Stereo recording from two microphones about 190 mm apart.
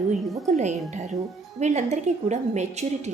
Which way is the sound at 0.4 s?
40° right (ahead or behind).